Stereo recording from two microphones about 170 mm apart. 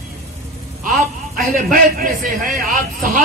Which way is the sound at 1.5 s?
55° right (ahead or behind).